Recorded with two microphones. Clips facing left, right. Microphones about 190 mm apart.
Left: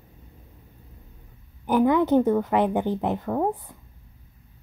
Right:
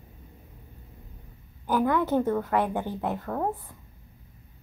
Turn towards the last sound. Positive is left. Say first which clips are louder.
# left 5 dB
turn(degrees=15)  # may be behind; listen again after turning